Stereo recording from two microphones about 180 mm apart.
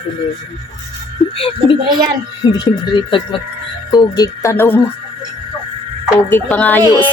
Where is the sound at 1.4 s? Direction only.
30° left (ahead or behind).